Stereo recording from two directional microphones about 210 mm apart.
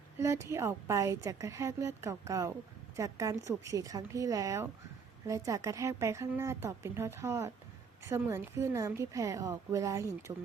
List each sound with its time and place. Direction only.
0.2 s a woman's voice: 15° right (ahead or behind)